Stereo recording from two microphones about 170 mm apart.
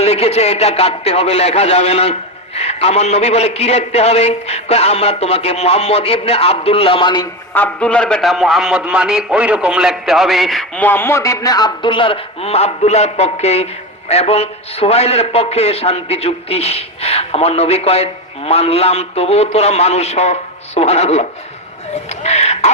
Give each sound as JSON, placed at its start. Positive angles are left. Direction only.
{"t": 0.0, "sound": "a man's voice", "side_deg": 40}
{"t": 7.5, "sound": "a man's voice", "side_deg": 10}